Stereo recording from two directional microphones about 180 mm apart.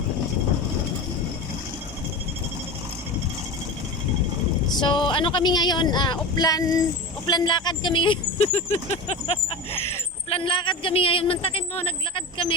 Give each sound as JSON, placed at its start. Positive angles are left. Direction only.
{"t": 4.7, "sound": "speech", "side_deg": 25}